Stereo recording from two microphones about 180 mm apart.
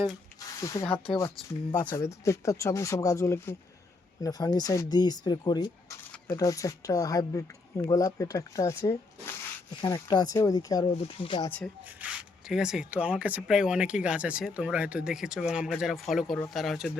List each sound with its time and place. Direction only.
0.3 s a sound: 20° left (ahead or behind)
1.8 s speech: 20° left (ahead or behind)
11.9 s speech: 5° right (ahead or behind)